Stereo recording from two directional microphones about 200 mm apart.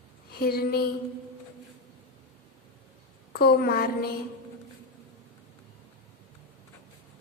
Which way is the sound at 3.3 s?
50° left (ahead or behind).